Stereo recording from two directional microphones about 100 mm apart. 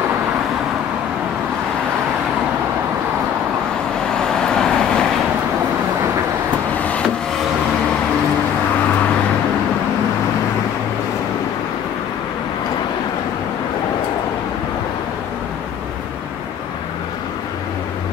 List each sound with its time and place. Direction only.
4.2 s vehicle: 5° left (ahead or behind)
6.8 s vehicle: 15° left (ahead or behind)